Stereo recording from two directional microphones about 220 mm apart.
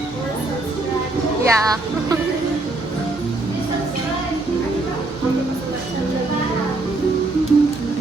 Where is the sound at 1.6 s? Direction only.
15° right (ahead or behind).